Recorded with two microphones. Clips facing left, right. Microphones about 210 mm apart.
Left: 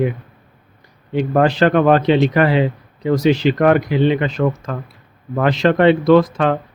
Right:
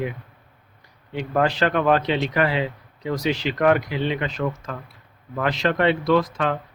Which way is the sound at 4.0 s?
30° left (ahead or behind).